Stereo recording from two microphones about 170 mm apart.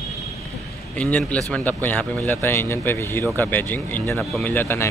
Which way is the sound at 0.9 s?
10° left (ahead or behind).